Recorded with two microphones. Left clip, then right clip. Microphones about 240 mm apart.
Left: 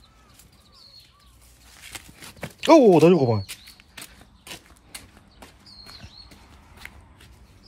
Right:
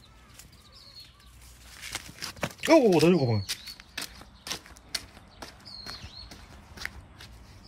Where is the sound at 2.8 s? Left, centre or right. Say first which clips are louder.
Left 7 dB; left.